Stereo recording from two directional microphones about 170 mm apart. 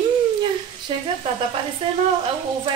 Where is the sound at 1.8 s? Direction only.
35° right (ahead or behind).